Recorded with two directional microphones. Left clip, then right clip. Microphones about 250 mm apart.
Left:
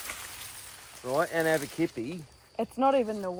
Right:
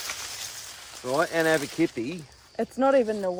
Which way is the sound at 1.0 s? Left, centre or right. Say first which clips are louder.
Right 3 dB; right.